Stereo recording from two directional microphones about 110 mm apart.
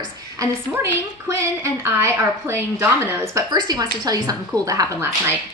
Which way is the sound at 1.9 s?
20° right (ahead or behind).